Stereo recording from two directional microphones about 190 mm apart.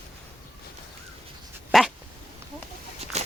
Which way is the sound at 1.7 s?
Centre (ahead or behind).